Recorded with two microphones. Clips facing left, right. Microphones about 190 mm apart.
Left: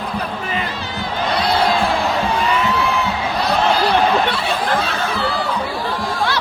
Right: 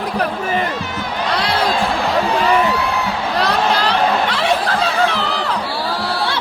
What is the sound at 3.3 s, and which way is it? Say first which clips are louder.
Chatter: even; 90° right.